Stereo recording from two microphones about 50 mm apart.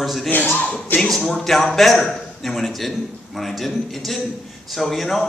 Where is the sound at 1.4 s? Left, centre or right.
Centre.